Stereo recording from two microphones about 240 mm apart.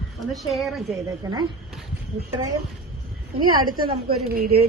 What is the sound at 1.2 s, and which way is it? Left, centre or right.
Speech, centre.